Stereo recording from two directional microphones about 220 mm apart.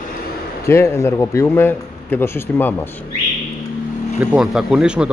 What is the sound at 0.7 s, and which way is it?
A man's voice, 10° left (ahead or behind).